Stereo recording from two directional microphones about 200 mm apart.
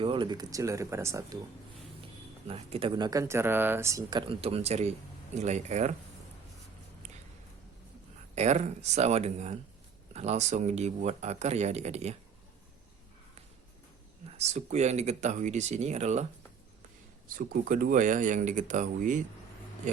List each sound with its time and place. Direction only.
0.0 s speech: 25° right (ahead or behind)
2.5 s speech: 30° right (ahead or behind)
8.4 s speech: 35° right (ahead or behind)
14.3 s speech: 35° right (ahead or behind)
17.2 s speech: 45° right (ahead or behind)